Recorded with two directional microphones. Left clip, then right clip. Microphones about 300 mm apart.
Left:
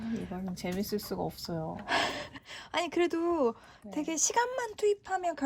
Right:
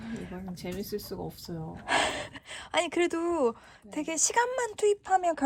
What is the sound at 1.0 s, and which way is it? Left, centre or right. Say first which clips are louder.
Speech: left 3 dB; centre.